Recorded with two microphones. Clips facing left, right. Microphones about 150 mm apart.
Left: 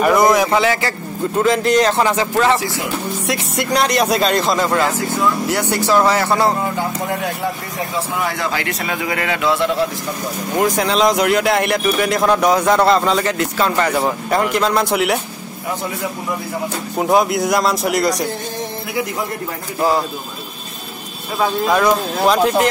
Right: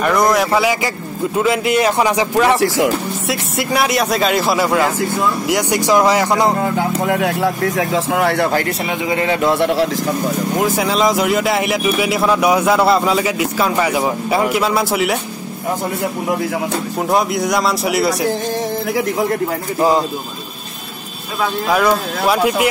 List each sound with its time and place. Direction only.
0.0 s speech: 5° left (ahead or behind); by 2.6 s 15° right (ahead or behind)
2.6 s speech: 90° right
3.3 s speech: 5° right (ahead or behind)
7.1 s speech: 70° right (ahead or behind)
8.5 s a man's voice: 45° right (ahead or behind)
8.8 s speech: 20° right (ahead or behind)
9.4 s a man's voice: 55° right (ahead or behind)
10.5 s speech: centre (ahead or behind)
17.0 s speech: centre (ahead or behind)
19.8 s speech: 20° right (ahead or behind)
22.2 s speech: 10° right (ahead or behind)